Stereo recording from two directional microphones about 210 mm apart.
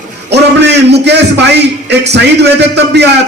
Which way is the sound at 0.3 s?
55° right (ahead or behind).